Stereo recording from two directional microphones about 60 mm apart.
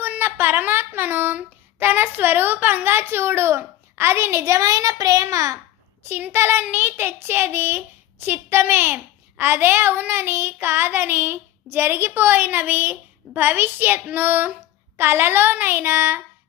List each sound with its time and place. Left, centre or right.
0.0 s a woman's voice: right
6.0 s child singing: right